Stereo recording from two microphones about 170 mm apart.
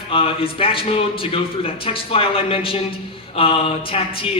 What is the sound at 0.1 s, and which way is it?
A woman's voice, 35° left (ahead or behind).